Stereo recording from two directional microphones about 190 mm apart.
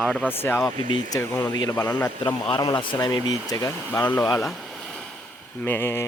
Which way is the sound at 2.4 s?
25° left (ahead or behind).